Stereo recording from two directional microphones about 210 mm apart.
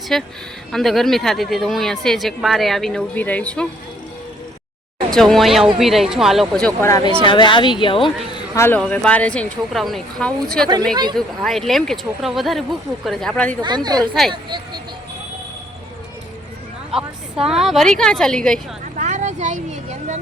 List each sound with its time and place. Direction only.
0.1 s speech: centre (ahead or behind)
5.1 s speech: centre (ahead or behind); by 8.1 s 25° left (ahead or behind)
8.3 s speech: 10° left (ahead or behind)
13.6 s a woman's voice: 20° right (ahead or behind)
14.2 s speech: centre (ahead or behind)
16.9 s a sound: 5° right (ahead or behind)
17.5 s speech: centre (ahead or behind)
18.9 s a sound: 35° right (ahead or behind)